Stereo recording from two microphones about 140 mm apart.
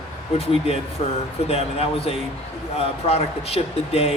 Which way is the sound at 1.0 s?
45° left (ahead or behind).